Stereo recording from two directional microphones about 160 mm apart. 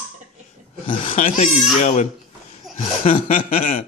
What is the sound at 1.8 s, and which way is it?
Chuckle, 50° left (ahead or behind).